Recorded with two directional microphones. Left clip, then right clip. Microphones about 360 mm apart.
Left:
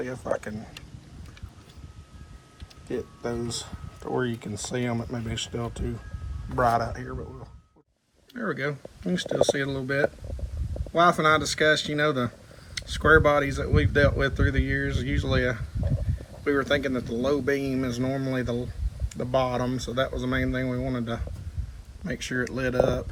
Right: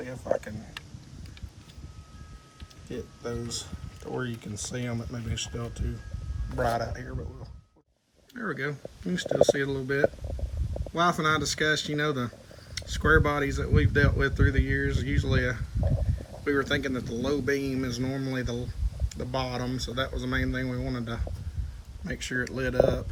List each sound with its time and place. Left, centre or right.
0.0 s speech: centre
3.2 s speech: centre
8.3 s speech: centre
19.0 s a sound: left
19.5 s speech: centre
22.0 s speech: centre